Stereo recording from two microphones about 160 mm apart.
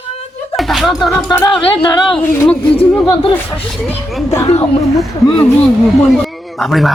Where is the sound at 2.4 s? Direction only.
10° left (ahead or behind).